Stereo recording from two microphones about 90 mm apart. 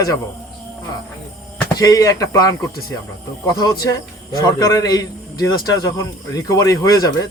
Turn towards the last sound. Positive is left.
turn(degrees=40)  # may be behind; listen again after turning